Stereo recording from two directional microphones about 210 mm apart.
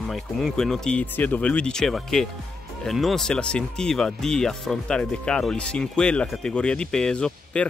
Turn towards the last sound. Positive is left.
turn(degrees=5)  # may be behind; listen again after turning